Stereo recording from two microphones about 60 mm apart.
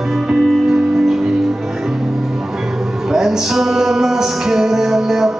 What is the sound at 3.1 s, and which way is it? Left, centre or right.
Music, centre.